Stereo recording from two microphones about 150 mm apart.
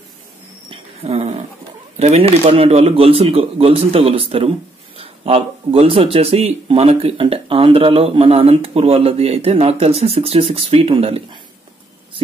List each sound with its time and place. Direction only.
0.7 s dog: 45° right (ahead or behind)
2.0 s speech: 45° right (ahead or behind)